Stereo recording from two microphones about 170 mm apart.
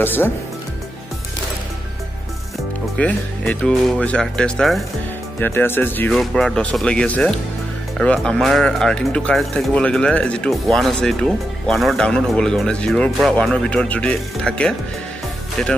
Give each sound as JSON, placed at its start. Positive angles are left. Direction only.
{"t": 0.0, "sound": "speech", "side_deg": 10}
{"t": 3.0, "sound": "speech", "side_deg": 5}
{"t": 5.4, "sound": "speech", "side_deg": 10}